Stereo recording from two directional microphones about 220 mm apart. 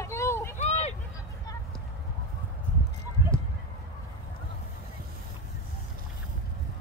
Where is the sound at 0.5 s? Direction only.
30° left (ahead or behind).